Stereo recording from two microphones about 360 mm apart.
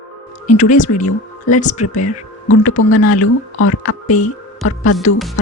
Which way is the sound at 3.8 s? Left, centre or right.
Left.